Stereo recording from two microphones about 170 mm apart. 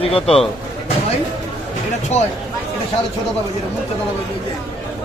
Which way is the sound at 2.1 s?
40° left (ahead or behind).